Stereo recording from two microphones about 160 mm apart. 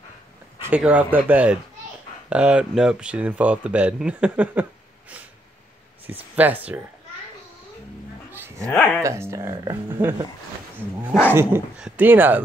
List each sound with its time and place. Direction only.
0.6 s speech: 10° right (ahead or behind)
6.3 s speech: 10° right (ahead or behind)
8.3 s dog: 15° right (ahead or behind)
8.6 s speech: 10° left (ahead or behind)
9.0 s speech: 15° right (ahead or behind)